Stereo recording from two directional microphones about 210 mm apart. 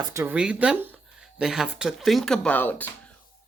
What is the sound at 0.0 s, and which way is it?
Speech, 15° right (ahead or behind).